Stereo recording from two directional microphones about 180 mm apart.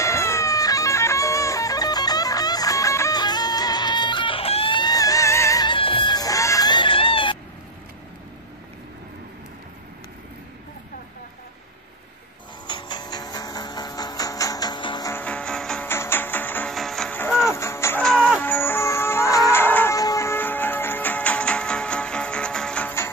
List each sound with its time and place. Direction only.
0.0 s music: 15° left (ahead or behind)
12.6 s music: 25° left (ahead or behind)
15.1 s music: 5° left (ahead or behind)
18.0 s music: 5° left (ahead or behind)